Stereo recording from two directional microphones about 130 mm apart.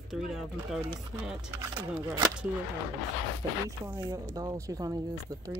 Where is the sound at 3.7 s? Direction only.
25° right (ahead or behind).